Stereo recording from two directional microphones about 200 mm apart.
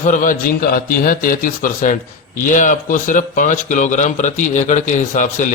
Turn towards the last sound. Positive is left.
turn(degrees=40)  # may be behind; listen again after turning